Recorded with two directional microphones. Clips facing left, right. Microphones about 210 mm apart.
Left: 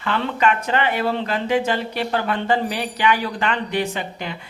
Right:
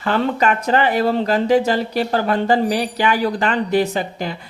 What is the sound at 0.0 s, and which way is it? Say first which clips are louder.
Speech: right 3 dB; 40° right (ahead or behind).